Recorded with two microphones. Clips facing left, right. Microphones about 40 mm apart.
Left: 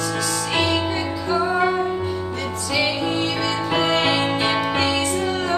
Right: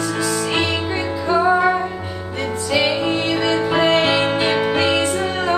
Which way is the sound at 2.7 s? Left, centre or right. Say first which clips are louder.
Right 4 dB; right.